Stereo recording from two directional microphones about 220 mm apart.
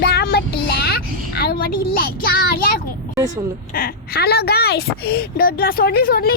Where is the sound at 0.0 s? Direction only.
45° left (ahead or behind).